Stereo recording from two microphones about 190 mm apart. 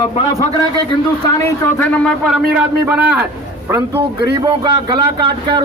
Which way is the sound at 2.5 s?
5° right (ahead or behind).